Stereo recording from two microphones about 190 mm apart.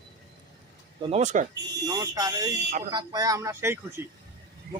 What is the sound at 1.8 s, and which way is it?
Speech, 20° right (ahead or behind).